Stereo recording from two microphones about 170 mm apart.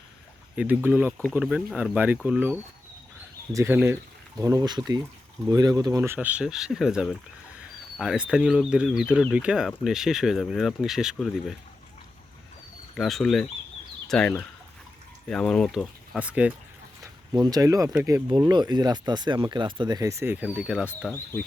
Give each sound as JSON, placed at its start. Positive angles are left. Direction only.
{"t": 0.5, "sound": "speech", "side_deg": -5}
{"t": 13.0, "sound": "speech", "side_deg": 0}
{"t": 17.0, "sound": "speech", "side_deg": -25}